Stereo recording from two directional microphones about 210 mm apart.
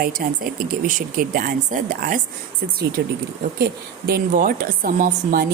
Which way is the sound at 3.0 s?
50° right (ahead or behind).